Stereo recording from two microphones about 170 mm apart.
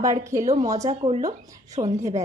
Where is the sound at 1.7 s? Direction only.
40° right (ahead or behind).